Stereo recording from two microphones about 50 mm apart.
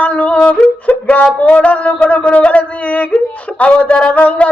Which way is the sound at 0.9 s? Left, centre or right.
Left.